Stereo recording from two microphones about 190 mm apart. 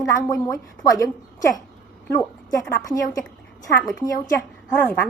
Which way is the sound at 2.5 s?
15° left (ahead or behind).